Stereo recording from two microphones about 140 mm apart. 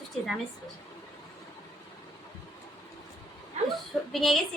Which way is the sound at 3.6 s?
55° right (ahead or behind).